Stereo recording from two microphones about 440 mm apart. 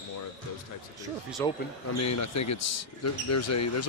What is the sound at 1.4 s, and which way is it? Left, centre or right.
Speech, centre.